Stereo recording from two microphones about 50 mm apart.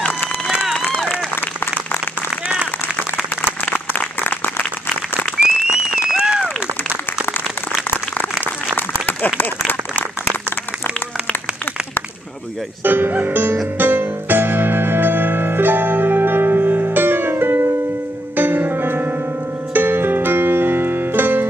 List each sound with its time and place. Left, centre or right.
3.6 s applause: left
5.7 s applause: centre
8.7 s applause: left
12.8 s music: right